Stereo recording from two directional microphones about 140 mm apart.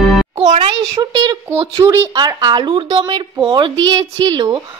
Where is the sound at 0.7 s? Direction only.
25° right (ahead or behind).